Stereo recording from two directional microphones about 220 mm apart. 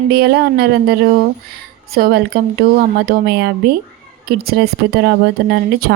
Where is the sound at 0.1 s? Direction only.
45° right (ahead or behind).